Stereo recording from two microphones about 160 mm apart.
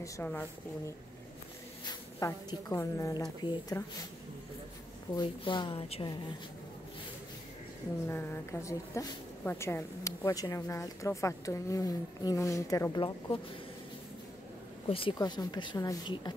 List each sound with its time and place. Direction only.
0.0 s a woman's voice: 10° left (ahead or behind)
5.1 s a woman's voice: 30° left (ahead or behind)
8.1 s a woman's voice: 15° left (ahead or behind)
14.9 s a woman's voice: 35° left (ahead or behind)